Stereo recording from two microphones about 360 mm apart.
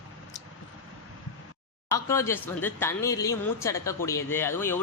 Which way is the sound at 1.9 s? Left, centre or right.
Centre.